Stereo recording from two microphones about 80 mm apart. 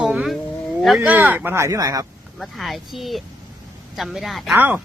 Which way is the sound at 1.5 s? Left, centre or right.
Right.